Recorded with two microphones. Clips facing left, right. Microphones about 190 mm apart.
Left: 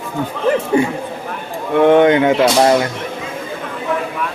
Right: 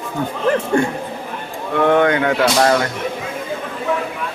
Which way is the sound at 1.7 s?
20° left (ahead or behind).